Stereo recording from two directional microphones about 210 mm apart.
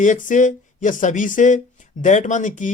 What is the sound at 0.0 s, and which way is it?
Speech, 40° left (ahead or behind).